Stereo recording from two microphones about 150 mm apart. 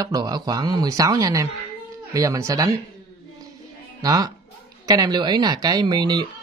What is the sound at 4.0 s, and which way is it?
Speech, 25° right (ahead or behind).